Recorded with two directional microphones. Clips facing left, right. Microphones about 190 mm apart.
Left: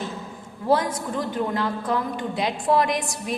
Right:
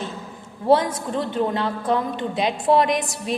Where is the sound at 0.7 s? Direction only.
25° right (ahead or behind).